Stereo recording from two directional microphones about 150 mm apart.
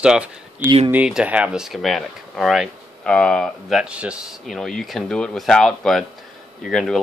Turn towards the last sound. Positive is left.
turn(degrees=0)  # may be behind; listen again after turning